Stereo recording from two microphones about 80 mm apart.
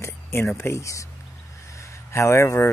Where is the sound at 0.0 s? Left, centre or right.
Left.